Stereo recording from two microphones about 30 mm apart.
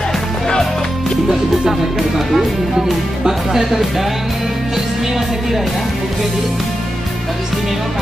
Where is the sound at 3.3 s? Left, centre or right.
Centre.